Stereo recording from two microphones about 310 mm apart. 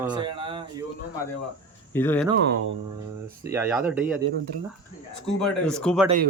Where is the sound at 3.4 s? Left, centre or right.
Centre.